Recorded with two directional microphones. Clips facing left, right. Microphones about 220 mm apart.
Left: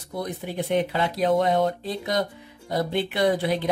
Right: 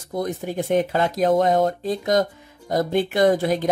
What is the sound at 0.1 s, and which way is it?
Speech, 45° right (ahead or behind).